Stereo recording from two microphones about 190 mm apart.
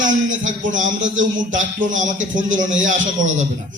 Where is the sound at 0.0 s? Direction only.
40° right (ahead or behind).